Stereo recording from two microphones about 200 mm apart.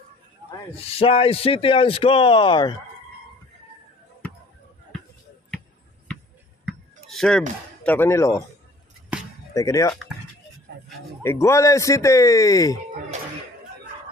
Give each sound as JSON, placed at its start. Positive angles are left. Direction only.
{"t": 0.7, "sound": "speech", "side_deg": 30}
{"t": 6.6, "sound": "a sound", "side_deg": 0}
{"t": 7.8, "sound": "speech", "side_deg": 10}
{"t": 9.5, "sound": "speech", "side_deg": 15}
{"t": 11.2, "sound": "speech", "side_deg": 15}